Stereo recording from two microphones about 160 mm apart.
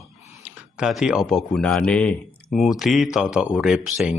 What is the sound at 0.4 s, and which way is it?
Speech, 5° right (ahead or behind).